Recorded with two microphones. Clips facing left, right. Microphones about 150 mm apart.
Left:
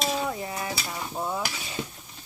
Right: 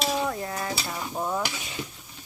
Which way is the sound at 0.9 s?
Centre (ahead or behind).